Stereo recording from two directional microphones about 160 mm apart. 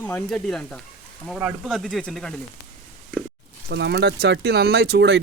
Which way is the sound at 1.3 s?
5° right (ahead or behind).